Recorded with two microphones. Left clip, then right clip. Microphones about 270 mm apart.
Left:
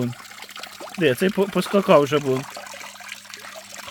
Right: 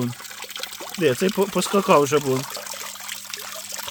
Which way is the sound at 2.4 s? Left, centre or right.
Right.